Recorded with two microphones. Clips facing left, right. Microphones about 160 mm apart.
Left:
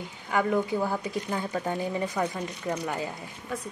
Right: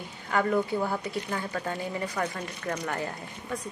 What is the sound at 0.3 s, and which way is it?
A woman's voice, 15° left (ahead or behind).